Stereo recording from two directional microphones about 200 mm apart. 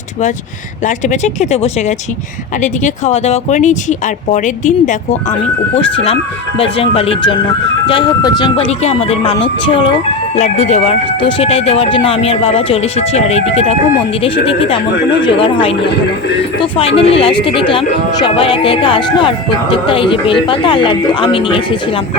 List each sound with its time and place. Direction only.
0.9 s speech: 35° left (ahead or behind)